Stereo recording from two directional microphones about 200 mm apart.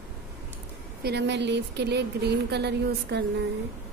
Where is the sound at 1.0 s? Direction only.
55° right (ahead or behind).